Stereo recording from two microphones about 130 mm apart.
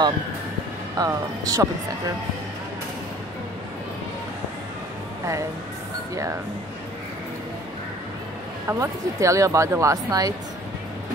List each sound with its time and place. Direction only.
0.9 s speech: 30° right (ahead or behind)
8.6 s speech: 20° right (ahead or behind)